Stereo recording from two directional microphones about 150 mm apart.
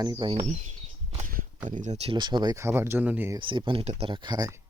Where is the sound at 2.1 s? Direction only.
30° right (ahead or behind); by 3.3 s 10° right (ahead or behind).